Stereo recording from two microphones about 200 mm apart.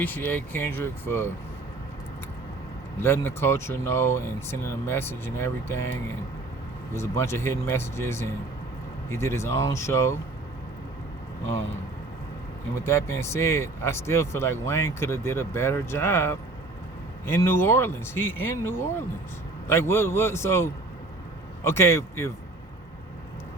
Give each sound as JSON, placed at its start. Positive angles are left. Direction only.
{"t": 0.0, "sound": "speech", "side_deg": 10}
{"t": 3.0, "sound": "speech", "side_deg": 10}
{"t": 6.9, "sound": "speech", "side_deg": 15}
{"t": 12.8, "sound": "speech", "side_deg": 10}